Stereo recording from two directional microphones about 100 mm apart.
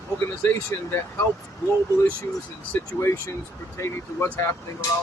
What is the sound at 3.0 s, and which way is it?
Speech, 25° left (ahead or behind).